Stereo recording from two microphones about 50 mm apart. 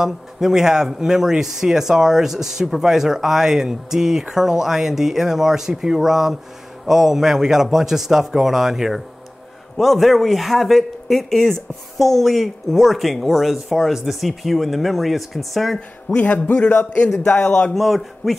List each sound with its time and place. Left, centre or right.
0.0 s speech: centre
16.2 s a man's voice: left
17.7 s speech: centre